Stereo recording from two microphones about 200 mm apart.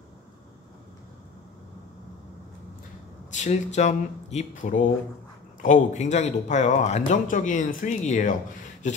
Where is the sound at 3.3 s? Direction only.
35° left (ahead or behind).